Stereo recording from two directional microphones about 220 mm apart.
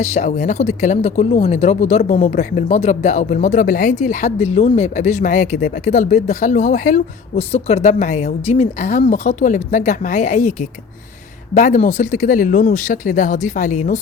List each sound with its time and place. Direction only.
0.0 s speech: 30° left (ahead or behind)